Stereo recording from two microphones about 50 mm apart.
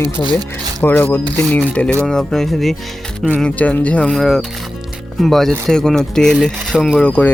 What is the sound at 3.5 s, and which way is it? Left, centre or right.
Speech, left.